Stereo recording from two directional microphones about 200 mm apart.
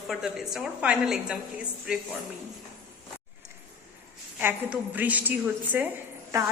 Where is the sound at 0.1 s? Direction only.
Centre (ahead or behind).